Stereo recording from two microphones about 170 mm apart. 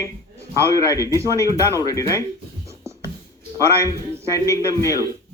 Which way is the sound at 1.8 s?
20° left (ahead or behind).